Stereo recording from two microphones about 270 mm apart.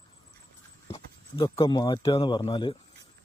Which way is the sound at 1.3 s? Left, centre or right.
Centre.